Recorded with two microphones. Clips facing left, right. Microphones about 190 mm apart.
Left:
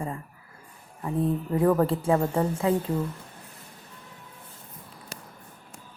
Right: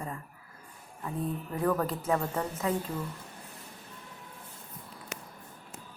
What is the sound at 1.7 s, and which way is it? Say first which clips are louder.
A woman's voice: left 6 dB; 30° left (ahead or behind).